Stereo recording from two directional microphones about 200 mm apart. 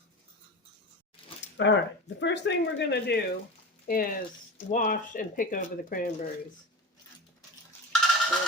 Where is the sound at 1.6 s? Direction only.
65° left (ahead or behind); by 6.1 s 40° left (ahead or behind).